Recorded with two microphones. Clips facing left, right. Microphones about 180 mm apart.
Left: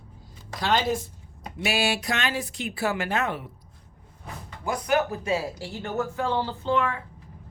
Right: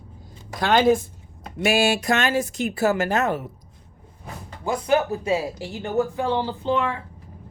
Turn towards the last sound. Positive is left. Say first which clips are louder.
# right 2 dB
turn(degrees=-25)  # may be behind; listen again after turning